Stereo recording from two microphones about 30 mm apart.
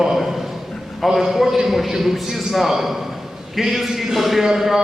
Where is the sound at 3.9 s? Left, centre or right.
Centre.